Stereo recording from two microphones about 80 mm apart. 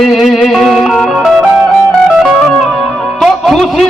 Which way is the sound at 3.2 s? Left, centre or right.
Centre.